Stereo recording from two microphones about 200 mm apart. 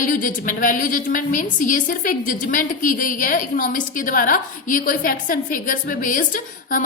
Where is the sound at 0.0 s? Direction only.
40° left (ahead or behind).